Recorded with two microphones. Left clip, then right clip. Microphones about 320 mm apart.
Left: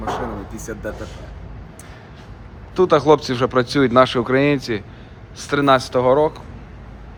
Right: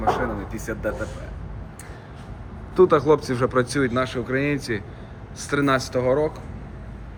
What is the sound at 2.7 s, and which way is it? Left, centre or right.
Speech, centre.